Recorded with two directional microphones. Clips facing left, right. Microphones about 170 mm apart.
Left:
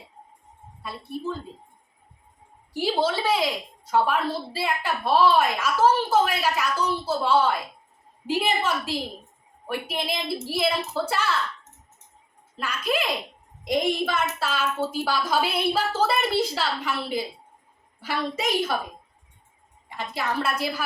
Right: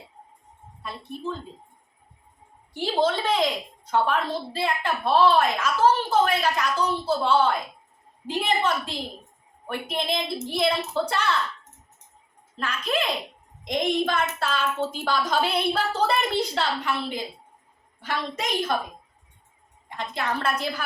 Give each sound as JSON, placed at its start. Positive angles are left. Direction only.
{"t": 0.8, "sound": "a child's voice", "side_deg": 5}
{"t": 2.7, "sound": "a woman's voice", "side_deg": 10}
{"t": 12.5, "sound": "a woman's voice", "side_deg": 5}
{"t": 20.0, "sound": "a woman's voice", "side_deg": 5}